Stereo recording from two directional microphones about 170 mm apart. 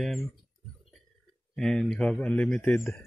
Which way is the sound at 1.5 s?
5° left (ahead or behind).